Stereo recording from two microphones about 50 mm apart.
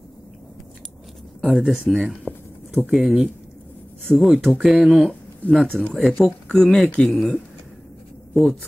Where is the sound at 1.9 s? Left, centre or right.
Centre.